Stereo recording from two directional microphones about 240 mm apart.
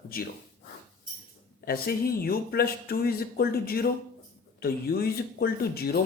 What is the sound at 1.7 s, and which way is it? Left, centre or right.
Speech, left.